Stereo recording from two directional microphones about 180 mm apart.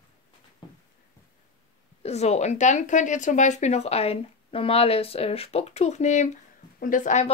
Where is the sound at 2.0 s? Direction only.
35° left (ahead or behind).